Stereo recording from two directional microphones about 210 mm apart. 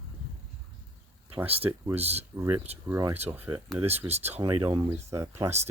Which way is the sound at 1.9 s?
30° right (ahead or behind).